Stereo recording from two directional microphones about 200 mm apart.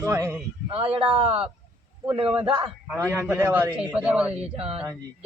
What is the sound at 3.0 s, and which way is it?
A man's voice, 15° right (ahead or behind).